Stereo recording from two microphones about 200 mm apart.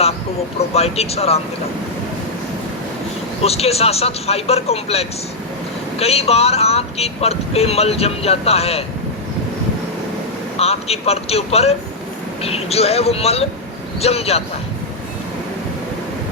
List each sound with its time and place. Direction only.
0.7 s speech: 30° left (ahead or behind)
3.4 s speech: 30° left (ahead or behind)
10.6 s speech: 30° left (ahead or behind)